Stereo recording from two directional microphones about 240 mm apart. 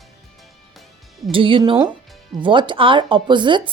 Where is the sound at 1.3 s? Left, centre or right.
Right.